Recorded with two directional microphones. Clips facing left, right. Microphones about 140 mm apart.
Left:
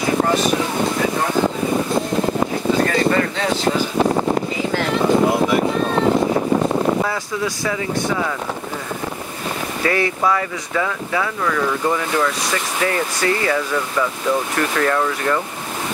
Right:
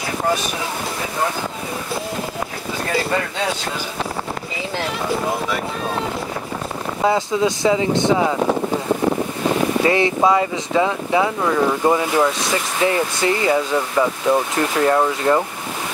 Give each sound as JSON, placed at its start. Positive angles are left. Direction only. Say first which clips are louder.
{"t": 7.1, "sound": "speech", "louder": "right 6 dB", "side_deg": -20}
{"t": 9.8, "sound": "speech", "louder": "right 1 dB", "side_deg": -25}